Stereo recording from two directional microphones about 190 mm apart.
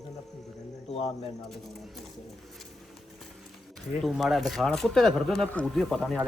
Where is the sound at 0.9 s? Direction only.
35° left (ahead or behind).